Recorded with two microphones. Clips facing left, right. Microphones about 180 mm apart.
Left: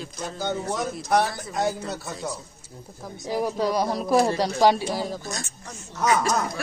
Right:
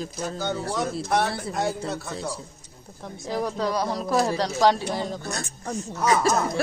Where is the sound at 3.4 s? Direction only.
10° left (ahead or behind).